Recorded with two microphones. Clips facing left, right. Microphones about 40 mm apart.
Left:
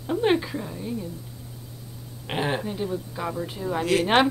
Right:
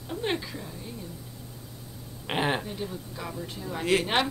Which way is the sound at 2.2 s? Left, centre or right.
Centre.